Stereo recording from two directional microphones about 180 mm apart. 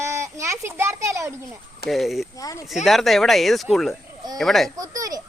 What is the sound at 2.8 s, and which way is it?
Speech, centre (ahead or behind).